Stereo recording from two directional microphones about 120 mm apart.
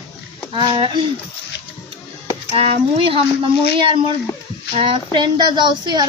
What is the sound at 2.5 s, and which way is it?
Speech, 50° right (ahead or behind).